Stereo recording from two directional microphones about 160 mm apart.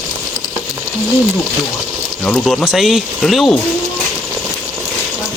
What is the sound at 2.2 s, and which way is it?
Speech, 5° left (ahead or behind).